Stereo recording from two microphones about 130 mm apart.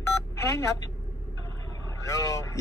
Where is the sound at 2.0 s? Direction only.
25° left (ahead or behind).